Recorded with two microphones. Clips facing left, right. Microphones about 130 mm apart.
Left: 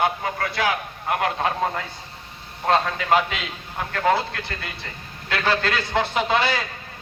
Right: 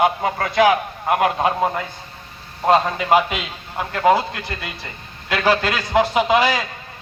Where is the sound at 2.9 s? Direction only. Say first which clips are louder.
Right 4 dB; 15° right (ahead or behind).